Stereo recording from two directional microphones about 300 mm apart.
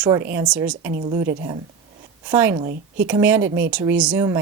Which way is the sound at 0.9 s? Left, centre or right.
Right.